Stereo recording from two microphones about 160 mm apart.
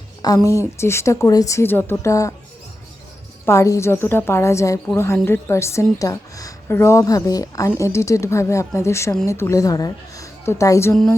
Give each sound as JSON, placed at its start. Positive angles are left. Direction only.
{"t": 0.2, "sound": "a woman's voice", "side_deg": 25}
{"t": 3.4, "sound": "a woman's voice", "side_deg": 15}